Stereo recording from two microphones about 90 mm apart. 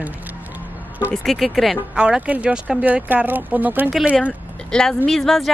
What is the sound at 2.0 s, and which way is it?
A woman's voice, 15° right (ahead or behind).